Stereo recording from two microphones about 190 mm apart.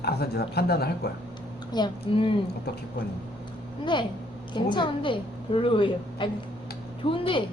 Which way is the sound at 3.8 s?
25° left (ahead or behind).